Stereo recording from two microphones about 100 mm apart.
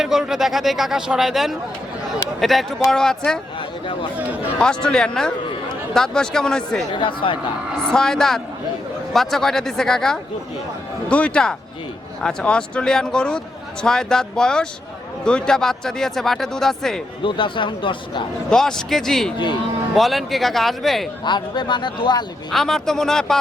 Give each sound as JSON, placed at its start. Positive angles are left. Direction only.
{"t": 0.0, "sound": "speech", "side_deg": -5}
{"t": 4.2, "sound": "speech", "side_deg": -15}
{"t": 4.5, "sound": "speech", "side_deg": 10}
{"t": 6.9, "sound": "speech", "side_deg": 55}
{"t": 7.8, "sound": "a woman's voice", "side_deg": 5}
{"t": 17.2, "sound": "speech", "side_deg": 55}
{"t": 18.5, "sound": "speech", "side_deg": 5}
{"t": 21.2, "sound": "speech", "side_deg": 50}
{"t": 22.5, "sound": "speech", "side_deg": 5}